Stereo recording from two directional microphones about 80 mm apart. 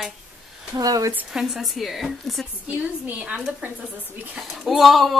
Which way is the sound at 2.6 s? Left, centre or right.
Centre.